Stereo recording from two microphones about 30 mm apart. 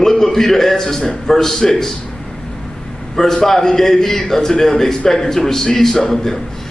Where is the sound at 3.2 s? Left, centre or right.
Centre.